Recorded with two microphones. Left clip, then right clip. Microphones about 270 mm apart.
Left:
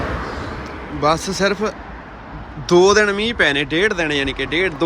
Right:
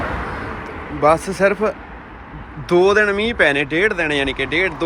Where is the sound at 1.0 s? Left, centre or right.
Centre.